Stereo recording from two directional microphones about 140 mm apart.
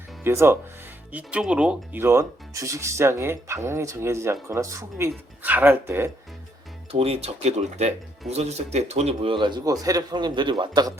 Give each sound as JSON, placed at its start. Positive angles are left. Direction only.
{"t": 0.3, "sound": "speech", "side_deg": -20}
{"t": 6.9, "sound": "speech", "side_deg": -45}